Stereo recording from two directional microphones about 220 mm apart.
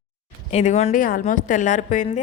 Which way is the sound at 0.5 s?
30° left (ahead or behind).